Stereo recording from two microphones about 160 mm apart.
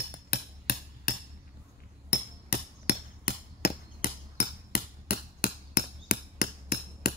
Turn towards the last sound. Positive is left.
turn(degrees=70)  # may be behind; listen again after turning